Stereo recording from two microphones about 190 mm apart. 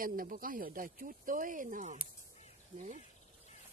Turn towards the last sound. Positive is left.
turn(degrees=-40)  # may be behind; listen again after turning